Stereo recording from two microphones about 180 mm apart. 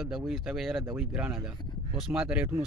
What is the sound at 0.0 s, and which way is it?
Speech, centre (ahead or behind).